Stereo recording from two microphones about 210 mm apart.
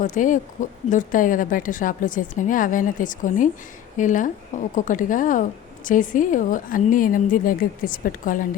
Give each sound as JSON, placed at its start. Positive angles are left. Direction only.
{"t": 0.0, "sound": "speech", "side_deg": 40}